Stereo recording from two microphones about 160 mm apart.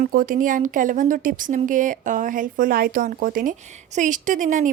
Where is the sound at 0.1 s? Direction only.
60° right (ahead or behind).